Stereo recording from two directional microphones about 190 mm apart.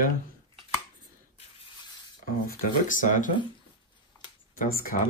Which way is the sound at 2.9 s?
45° left (ahead or behind).